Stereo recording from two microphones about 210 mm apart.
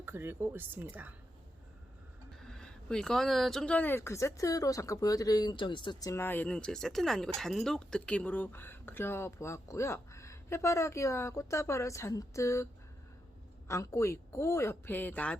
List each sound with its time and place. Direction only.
0.0 s speech: 10° right (ahead or behind)
2.4 s speech: 5° left (ahead or behind)
13.7 s speech: 15° left (ahead or behind)